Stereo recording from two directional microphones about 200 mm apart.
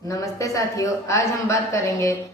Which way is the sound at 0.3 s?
15° left (ahead or behind).